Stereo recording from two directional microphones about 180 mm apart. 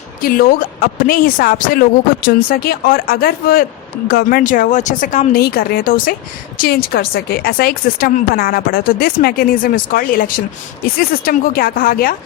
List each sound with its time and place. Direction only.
0.2 s speech: 55° left (ahead or behind)